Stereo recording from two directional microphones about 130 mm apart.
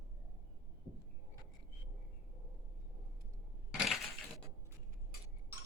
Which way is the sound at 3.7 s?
Centre (ahead or behind).